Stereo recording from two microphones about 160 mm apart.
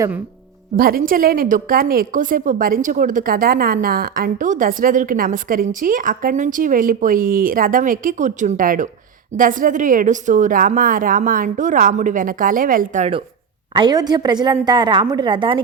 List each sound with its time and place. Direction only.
0.8 s a woman's voice: 65° right (ahead or behind)
13.7 s a woman's voice: 25° right (ahead or behind)